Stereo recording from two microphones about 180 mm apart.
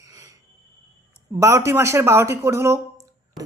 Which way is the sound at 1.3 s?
15° right (ahead or behind).